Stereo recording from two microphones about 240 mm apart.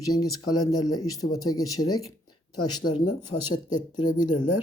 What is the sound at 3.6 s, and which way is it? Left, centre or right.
Speech, centre.